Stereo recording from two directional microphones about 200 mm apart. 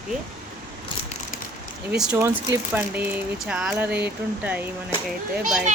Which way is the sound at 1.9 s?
10° right (ahead or behind).